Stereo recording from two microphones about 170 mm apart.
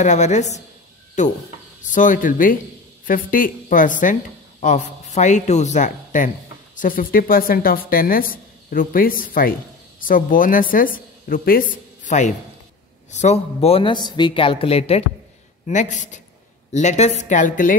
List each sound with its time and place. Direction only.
0.0 s a woman's voice: 45° left (ahead or behind)